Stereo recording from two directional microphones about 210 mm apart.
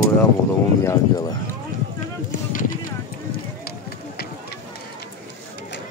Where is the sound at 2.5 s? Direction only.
40° left (ahead or behind).